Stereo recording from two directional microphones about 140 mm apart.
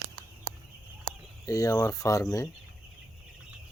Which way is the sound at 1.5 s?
25° left (ahead or behind).